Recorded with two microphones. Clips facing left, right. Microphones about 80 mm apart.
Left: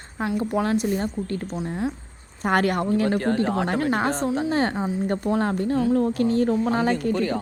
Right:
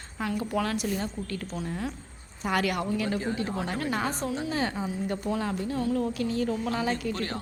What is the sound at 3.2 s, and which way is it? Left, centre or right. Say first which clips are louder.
Speech: left 8 dB; left.